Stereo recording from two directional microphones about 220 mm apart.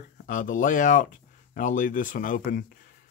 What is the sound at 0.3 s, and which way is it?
Speech, 35° left (ahead or behind).